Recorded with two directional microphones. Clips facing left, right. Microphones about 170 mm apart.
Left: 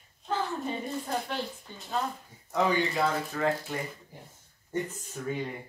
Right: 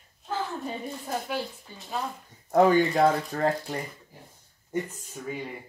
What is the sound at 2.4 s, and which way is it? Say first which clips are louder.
Speech: right 7 dB; 50° right (ahead or behind).